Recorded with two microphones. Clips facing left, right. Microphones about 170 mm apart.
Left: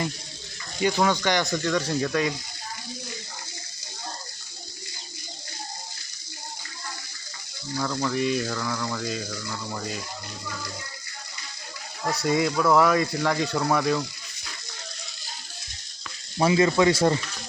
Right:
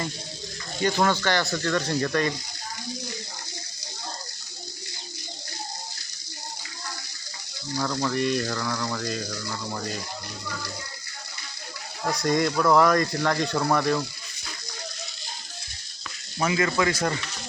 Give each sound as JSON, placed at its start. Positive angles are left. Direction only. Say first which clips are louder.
{"t": 0.8, "sound": "speech", "louder": "even", "side_deg": 5}
{"t": 1.5, "sound": "speech", "louder": "left 1 dB", "side_deg": 5}
{"t": 7.9, "sound": "speech", "louder": "even", "side_deg": 0}
{"t": 12.0, "sound": "speech", "louder": "even", "side_deg": 5}
{"t": 16.4, "sound": "speech", "louder": "left 4 dB", "side_deg": 25}